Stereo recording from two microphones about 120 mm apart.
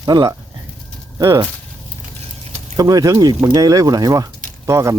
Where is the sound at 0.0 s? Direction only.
35° right (ahead or behind).